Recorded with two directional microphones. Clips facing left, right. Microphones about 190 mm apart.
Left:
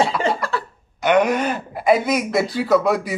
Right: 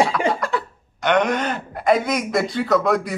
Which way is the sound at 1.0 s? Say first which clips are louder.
Left 2 dB; 5° left (ahead or behind).